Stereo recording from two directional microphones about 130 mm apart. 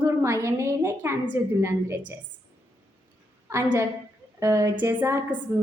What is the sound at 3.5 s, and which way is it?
A woman's voice, 20° right (ahead or behind).